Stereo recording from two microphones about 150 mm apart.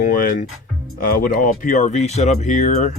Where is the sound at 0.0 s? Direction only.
60° left (ahead or behind).